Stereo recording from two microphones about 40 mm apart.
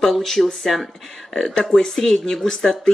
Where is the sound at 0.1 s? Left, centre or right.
Centre.